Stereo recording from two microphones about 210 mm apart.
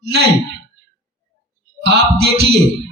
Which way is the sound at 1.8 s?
50° right (ahead or behind).